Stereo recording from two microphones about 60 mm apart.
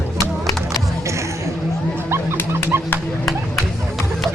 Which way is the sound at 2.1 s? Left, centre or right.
Right.